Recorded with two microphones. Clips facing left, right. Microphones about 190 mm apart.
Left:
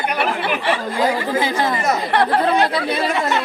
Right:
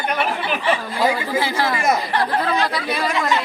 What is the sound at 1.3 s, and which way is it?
Speech, 20° left (ahead or behind).